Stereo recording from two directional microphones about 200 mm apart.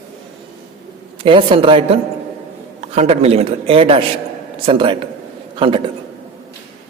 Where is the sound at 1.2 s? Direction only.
25° right (ahead or behind).